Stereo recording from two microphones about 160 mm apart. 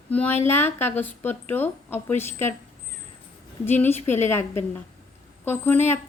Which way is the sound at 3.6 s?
10° left (ahead or behind).